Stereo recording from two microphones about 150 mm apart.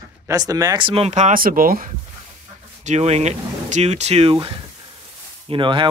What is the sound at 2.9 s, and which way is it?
A man's voice, 45° right (ahead or behind).